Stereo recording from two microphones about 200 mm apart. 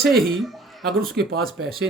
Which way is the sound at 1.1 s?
50° right (ahead or behind).